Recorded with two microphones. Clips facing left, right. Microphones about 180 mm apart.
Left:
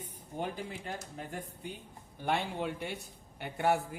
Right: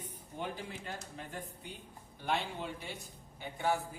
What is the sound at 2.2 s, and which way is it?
A man's voice, 55° left (ahead or behind).